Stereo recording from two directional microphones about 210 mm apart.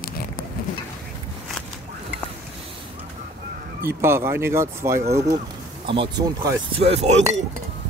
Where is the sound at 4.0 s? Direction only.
10° right (ahead or behind).